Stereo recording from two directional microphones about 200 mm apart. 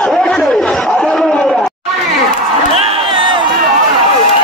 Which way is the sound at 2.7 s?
30° right (ahead or behind).